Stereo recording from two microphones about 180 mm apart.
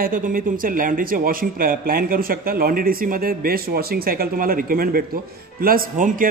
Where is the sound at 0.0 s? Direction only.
50° right (ahead or behind).